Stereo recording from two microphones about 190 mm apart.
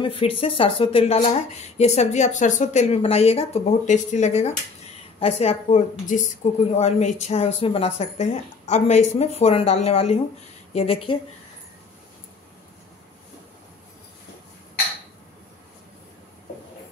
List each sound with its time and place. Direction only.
0.0 s speech: 30° left (ahead or behind)